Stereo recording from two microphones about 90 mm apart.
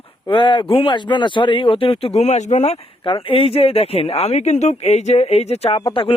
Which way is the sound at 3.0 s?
75° left (ahead or behind).